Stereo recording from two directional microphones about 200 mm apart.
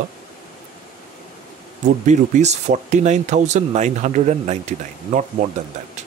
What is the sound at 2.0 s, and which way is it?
Speech, 35° right (ahead or behind).